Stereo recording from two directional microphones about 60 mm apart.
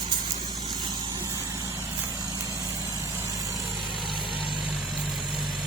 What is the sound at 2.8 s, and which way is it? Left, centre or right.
Vehicle, right.